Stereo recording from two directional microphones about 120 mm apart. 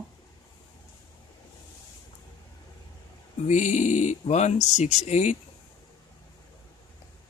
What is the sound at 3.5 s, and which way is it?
Speech, 90° left.